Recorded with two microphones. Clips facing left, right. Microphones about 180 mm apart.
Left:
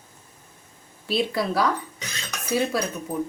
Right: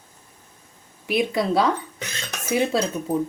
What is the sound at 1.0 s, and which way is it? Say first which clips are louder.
Speech: right 3 dB; 20° right (ahead or behind).